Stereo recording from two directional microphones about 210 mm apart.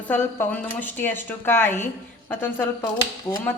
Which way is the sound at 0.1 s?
10° left (ahead or behind).